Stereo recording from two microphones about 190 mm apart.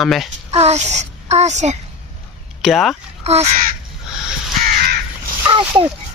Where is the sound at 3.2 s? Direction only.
35° right (ahead or behind).